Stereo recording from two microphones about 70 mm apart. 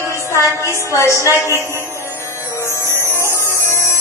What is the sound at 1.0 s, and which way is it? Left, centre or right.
Speech, right.